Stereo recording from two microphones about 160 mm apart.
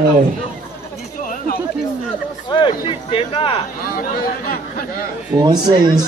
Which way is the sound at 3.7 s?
65° left (ahead or behind).